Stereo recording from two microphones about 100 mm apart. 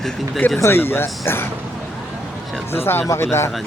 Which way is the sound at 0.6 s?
25° left (ahead or behind).